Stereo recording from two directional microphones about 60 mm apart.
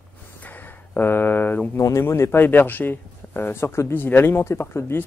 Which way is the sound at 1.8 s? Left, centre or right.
Left.